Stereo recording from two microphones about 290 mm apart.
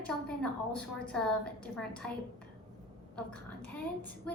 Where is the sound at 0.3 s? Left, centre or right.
Centre.